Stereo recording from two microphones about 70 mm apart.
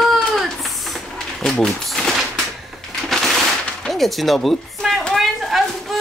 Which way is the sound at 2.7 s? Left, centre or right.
Centre.